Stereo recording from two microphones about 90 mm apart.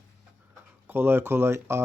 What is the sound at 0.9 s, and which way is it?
Speech, 25° right (ahead or behind).